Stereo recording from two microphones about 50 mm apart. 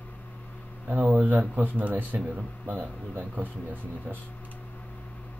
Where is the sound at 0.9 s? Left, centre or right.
Right.